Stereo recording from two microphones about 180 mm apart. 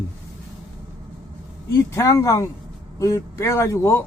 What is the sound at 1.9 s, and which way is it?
Speech, 15° left (ahead or behind).